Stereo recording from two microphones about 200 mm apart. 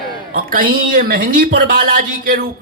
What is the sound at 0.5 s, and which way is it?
A man's voice, 45° right (ahead or behind).